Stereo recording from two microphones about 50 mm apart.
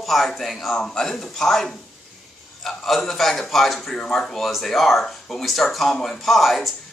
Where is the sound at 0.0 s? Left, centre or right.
Centre.